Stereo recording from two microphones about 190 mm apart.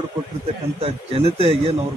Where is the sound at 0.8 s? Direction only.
30° right (ahead or behind).